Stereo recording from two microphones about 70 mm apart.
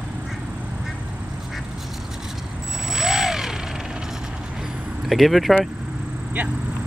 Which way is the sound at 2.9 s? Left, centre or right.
Centre.